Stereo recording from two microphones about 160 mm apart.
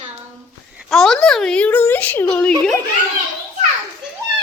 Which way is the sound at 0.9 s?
Centre (ahead or behind).